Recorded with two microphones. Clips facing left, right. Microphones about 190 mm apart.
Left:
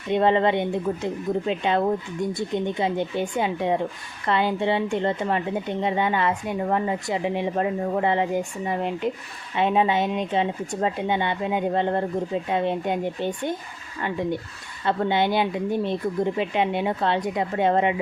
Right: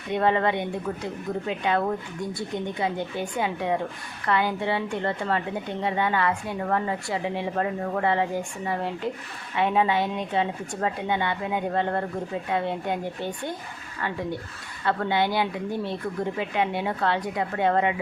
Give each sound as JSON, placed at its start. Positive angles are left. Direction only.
{"t": 0.1, "sound": "a woman's voice", "side_deg": 25}